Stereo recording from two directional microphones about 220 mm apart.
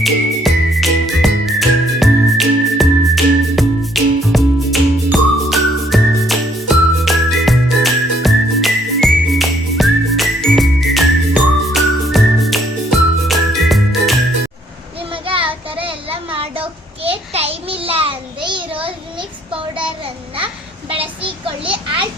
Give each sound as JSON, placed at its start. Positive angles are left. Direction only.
{"t": 0.0, "sound": "music", "side_deg": 0}
{"t": 15.1, "sound": "child singing", "side_deg": -25}
{"t": 21.0, "sound": "child singing", "side_deg": -25}